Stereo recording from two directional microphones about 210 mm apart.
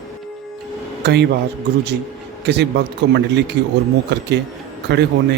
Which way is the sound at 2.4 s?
55° right (ahead or behind).